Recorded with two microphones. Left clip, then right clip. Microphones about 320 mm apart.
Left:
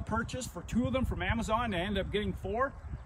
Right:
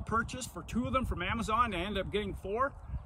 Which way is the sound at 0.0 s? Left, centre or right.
Centre.